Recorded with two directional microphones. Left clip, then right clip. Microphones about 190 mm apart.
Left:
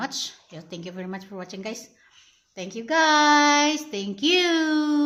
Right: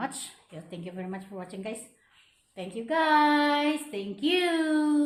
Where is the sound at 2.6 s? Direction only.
35° left (ahead or behind).